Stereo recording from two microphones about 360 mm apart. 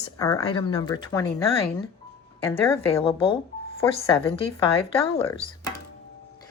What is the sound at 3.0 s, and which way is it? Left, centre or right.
Speech, centre.